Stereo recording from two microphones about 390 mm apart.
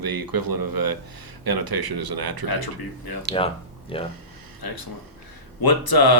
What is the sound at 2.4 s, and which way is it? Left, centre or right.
Speech, left.